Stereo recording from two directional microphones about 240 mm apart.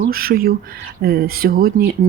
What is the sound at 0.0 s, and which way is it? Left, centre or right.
Speech, right.